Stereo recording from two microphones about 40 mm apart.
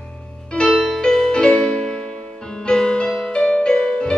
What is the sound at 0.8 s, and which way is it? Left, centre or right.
Music, centre.